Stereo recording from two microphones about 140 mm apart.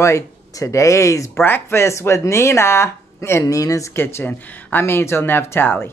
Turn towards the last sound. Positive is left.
turn(degrees=15)  # may be behind; listen again after turning